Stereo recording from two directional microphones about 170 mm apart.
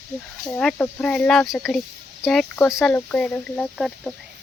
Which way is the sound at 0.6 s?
5° left (ahead or behind).